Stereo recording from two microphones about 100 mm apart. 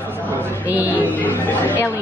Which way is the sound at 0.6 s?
15° right (ahead or behind).